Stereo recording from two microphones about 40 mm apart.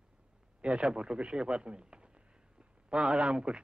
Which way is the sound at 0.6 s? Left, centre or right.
Right.